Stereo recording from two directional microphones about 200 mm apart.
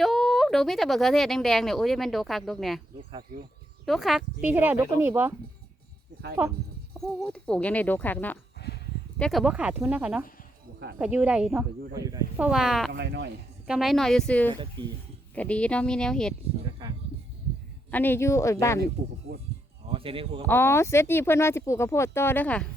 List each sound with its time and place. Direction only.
0.0 s speech: centre (ahead or behind)
3.8 s speech: centre (ahead or behind)
6.9 s speech: 5° left (ahead or behind)
11.9 s speech: 15° right (ahead or behind)
12.4 s speech: 5° right (ahead or behind)
12.9 s speech: 60° right (ahead or behind)
13.7 s speech: centre (ahead or behind)
14.5 s speech: 25° right (ahead or behind)
15.4 s speech: 5° left (ahead or behind)
16.8 s a sound: 20° right (ahead or behind)
17.9 s speech: 10° left (ahead or behind)
19.9 s speech: 25° right (ahead or behind)
20.5 s speech: 10° left (ahead or behind)